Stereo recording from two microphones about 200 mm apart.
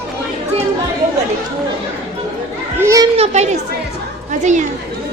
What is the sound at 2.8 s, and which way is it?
Children playing, 15° right (ahead or behind).